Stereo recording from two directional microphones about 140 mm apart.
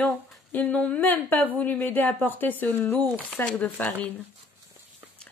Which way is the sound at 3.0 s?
5° left (ahead or behind).